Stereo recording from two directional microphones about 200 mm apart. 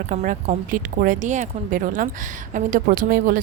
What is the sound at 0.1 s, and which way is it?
A woman's voice, 35° right (ahead or behind).